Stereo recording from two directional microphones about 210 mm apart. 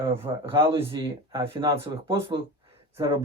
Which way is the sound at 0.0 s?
10° right (ahead or behind).